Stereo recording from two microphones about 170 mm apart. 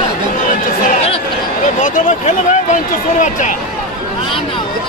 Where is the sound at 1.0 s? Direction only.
35° left (ahead or behind).